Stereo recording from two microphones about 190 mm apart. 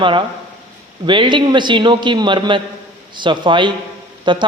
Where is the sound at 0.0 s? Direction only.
25° right (ahead or behind).